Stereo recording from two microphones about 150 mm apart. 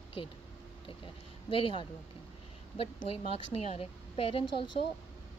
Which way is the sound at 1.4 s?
35° left (ahead or behind).